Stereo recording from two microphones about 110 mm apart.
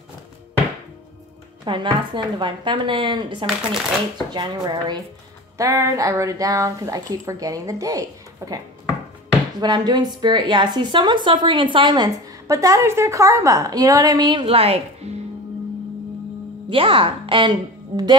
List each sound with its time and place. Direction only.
1.6 s a woman's voice: 45° right (ahead or behind)
3.4 s speech: 5° right (ahead or behind)
4.3 s a woman's voice: 45° right (ahead or behind)
5.6 s speech: 30° right (ahead or behind)
9.6 s a woman's voice: 40° right (ahead or behind)
12.4 s a woman's voice: 30° right (ahead or behind)
14.4 s a woman's voice: 60° right (ahead or behind)
16.6 s a woman's voice: 55° right (ahead or behind)